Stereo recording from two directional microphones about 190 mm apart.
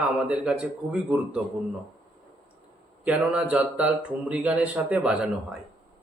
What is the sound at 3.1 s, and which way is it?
Speech, 5° right (ahead or behind).